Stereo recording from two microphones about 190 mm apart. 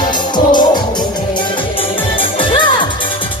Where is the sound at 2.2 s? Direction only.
25° left (ahead or behind).